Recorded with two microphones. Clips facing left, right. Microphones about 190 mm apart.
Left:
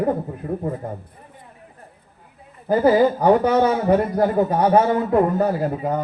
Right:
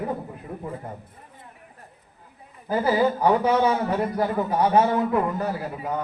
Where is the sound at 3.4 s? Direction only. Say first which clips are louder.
Left 3 dB; 55° left (ahead or behind).